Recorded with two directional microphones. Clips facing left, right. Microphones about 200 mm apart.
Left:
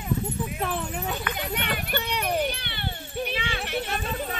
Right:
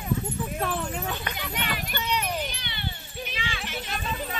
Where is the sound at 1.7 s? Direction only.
60° left (ahead or behind).